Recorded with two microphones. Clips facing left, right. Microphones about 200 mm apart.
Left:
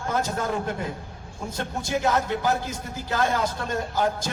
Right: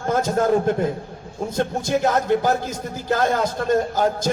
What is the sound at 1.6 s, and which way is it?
A man's voice, 45° right (ahead or behind).